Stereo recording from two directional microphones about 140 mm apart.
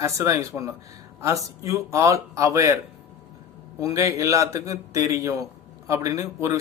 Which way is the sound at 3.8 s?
25° right (ahead or behind).